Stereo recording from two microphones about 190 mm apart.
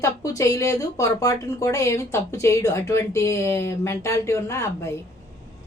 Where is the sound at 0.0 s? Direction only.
15° left (ahead or behind).